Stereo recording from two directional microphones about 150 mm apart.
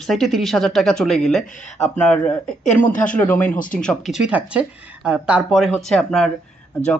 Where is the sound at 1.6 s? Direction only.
50° left (ahead or behind).